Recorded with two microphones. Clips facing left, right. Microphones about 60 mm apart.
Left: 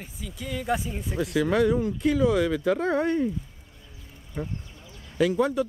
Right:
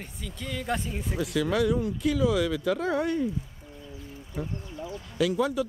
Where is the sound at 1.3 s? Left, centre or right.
Centre.